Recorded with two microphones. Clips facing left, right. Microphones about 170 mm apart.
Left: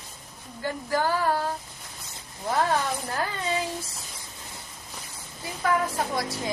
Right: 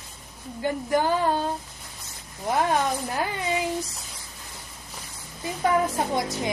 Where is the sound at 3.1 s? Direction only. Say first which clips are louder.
Right 2 dB; 15° right (ahead or behind).